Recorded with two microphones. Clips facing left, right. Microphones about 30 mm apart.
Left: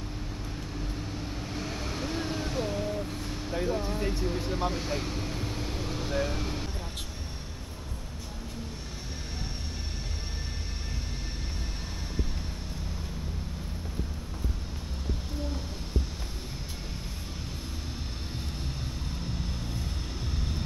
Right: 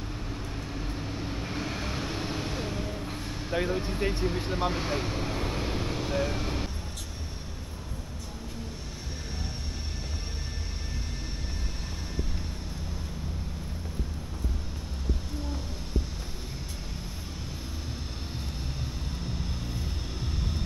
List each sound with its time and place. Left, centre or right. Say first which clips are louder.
0.7 s vehicle: right 1 dB; centre
3.5 s speech: right 1 dB; centre
4.3 s vehicle: right 1 dB; centre